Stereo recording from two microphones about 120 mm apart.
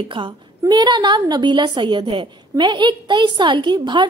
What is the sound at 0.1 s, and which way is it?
A woman's voice, 40° right (ahead or behind).